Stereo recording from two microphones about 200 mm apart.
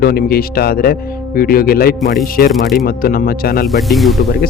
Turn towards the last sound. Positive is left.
turn(degrees=0)  # may be behind; listen again after turning